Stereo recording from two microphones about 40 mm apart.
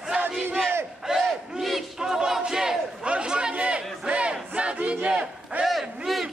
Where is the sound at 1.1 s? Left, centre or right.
Centre.